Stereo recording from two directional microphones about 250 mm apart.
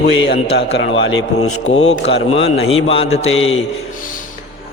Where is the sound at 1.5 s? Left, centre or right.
Left.